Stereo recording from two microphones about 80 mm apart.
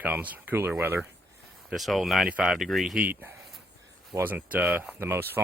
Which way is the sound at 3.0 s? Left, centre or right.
Right.